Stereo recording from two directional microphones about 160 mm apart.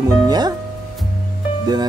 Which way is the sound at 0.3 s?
25° right (ahead or behind).